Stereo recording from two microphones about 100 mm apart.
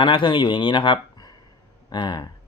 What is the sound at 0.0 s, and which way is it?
Speech, 55° left (ahead or behind).